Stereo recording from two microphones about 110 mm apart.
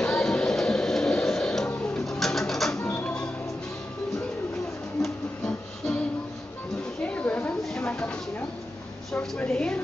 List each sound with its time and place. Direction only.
0.0 s music: 5° left (ahead or behind)
1.7 s a sound: 5° left (ahead or behind)
2.8 s music: 15° left (ahead or behind)
5.0 s music: 5° left (ahead or behind)
7.0 s a sound: 15° left (ahead or behind)
9.1 s a woman's voice: 10° left (ahead or behind)